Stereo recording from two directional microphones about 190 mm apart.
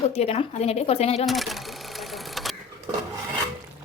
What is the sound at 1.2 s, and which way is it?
Cash register, centre (ahead or behind).